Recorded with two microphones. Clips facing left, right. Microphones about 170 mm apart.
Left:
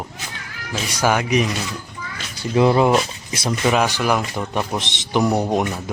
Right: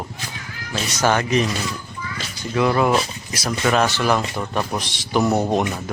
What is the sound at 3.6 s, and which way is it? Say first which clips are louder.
Speech: even; 10° left (ahead or behind).